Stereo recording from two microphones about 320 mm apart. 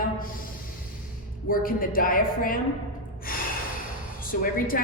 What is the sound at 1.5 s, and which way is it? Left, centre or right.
A woman's voice, left.